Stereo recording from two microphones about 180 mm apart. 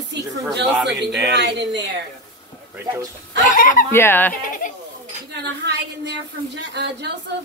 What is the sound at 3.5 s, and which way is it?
Speech, 45° left (ahead or behind).